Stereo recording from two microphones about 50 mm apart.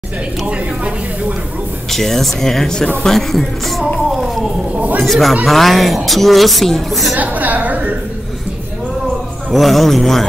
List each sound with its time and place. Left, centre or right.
1.9 s a woman's voice: centre
4.7 s speech: right
5.0 s a woman's voice: centre
7.2 s a woman's voice: right
9.5 s a woman's voice: centre